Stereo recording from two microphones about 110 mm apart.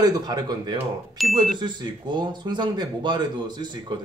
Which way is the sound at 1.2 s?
Centre (ahead or behind).